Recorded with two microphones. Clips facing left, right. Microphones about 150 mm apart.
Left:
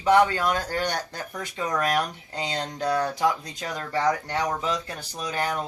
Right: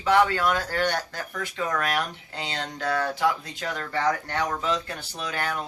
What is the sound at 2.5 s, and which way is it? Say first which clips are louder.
Speech: left 2 dB; 20° left (ahead or behind).